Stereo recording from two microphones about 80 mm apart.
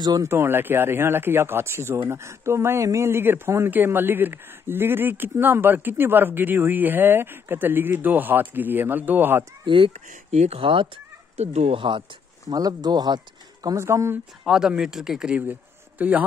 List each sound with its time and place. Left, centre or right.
0.2 s speech: right
9.7 s speech: right
12.4 s speech: right
13.7 s speech: right
14.4 s speech: centre
16.0 s speech: right